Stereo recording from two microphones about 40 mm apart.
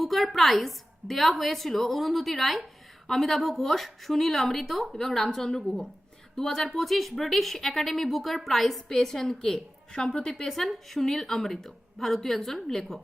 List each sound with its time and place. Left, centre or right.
0.0 s a woman's voice: centre
10.5 s a woman's voice: centre